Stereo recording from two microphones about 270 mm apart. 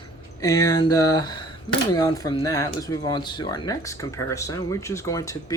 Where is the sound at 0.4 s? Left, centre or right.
Centre.